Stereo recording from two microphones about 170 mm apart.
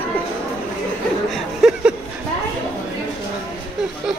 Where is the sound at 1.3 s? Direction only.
5° right (ahead or behind).